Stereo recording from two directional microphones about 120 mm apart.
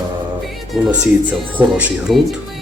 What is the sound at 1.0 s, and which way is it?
Speech, 10° right (ahead or behind).